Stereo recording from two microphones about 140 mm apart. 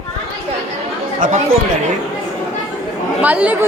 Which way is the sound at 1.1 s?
70° right (ahead or behind).